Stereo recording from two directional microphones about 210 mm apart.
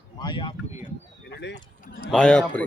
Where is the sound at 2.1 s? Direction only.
5° left (ahead or behind).